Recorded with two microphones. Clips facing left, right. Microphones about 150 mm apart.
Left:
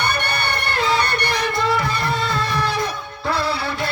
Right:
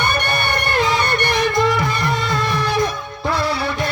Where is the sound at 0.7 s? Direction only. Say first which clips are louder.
Right 1 dB; 20° right (ahead or behind).